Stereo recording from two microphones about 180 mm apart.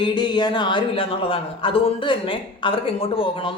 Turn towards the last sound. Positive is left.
turn(degrees=30)  # may be behind; listen again after turning